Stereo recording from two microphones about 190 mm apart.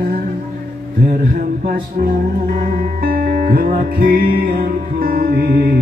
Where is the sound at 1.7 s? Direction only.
50° right (ahead or behind).